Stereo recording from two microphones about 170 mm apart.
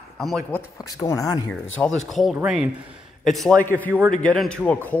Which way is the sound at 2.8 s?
30° right (ahead or behind).